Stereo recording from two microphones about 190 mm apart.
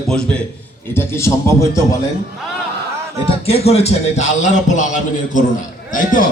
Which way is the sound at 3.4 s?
30° left (ahead or behind).